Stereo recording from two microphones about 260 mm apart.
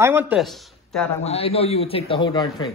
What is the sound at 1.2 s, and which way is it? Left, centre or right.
A man's voice, left.